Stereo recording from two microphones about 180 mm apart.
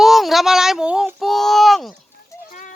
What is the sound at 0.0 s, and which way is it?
Child singing, centre (ahead or behind).